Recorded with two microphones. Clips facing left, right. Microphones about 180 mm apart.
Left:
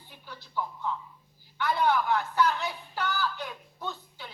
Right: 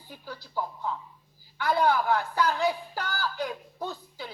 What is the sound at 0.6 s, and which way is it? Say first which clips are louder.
A woman's voice: even; 40° right (ahead or behind).